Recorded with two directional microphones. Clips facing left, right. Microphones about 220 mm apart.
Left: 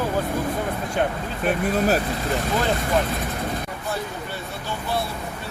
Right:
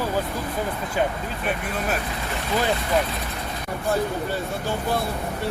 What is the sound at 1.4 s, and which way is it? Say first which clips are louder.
Speech: left 7 dB; 35° left (ahead or behind).